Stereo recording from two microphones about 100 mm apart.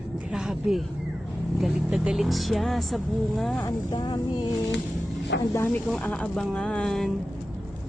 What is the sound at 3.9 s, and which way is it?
Speech, 50° left (ahead or behind).